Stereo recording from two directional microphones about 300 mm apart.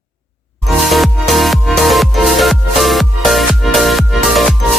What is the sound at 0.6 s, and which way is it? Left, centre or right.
Music, centre.